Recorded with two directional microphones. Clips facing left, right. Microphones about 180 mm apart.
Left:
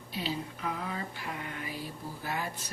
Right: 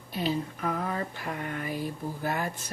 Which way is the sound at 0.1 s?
50° right (ahead or behind).